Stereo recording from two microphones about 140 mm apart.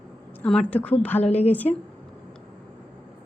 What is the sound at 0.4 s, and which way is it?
A woman's voice, 5° left (ahead or behind).